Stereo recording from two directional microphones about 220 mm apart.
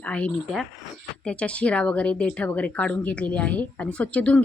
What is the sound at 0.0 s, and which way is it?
Speech, 5° left (ahead or behind).